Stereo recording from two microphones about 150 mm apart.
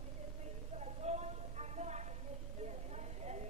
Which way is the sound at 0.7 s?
45° right (ahead or behind).